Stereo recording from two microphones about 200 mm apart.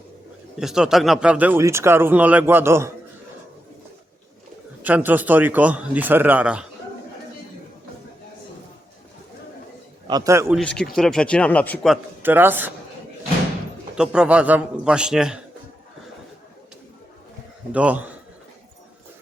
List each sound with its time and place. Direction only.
0.5 s speech: centre (ahead or behind)
4.8 s speech: 10° right (ahead or behind)
10.1 s speech: 15° right (ahead or behind)
10.5 s a man's voice: 5° left (ahead or behind)
12.2 s speech: 10° right (ahead or behind)
13.9 s a man's voice: 5° right (ahead or behind)
17.7 s speech: 5° right (ahead or behind)